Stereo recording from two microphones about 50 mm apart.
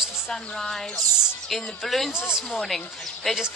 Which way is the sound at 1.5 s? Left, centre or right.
Centre.